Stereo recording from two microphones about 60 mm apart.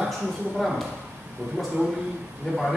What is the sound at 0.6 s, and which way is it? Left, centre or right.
Speech, centre.